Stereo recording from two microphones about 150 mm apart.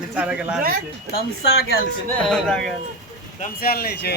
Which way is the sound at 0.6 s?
75° right (ahead or behind).